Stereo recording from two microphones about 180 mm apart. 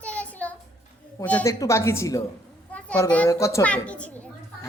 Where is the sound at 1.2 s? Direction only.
10° left (ahead or behind).